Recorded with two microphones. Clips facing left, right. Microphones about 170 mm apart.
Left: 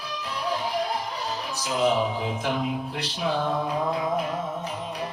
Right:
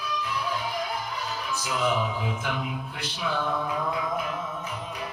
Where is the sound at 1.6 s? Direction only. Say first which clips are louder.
Left 4 dB; 35° left (ahead or behind).